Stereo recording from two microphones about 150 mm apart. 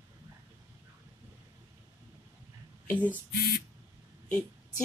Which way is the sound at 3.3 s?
90° left.